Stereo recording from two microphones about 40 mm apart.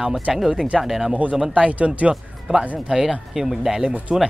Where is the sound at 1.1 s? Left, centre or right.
Right.